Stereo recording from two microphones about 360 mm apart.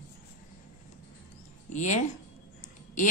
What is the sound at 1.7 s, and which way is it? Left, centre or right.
Speech, centre.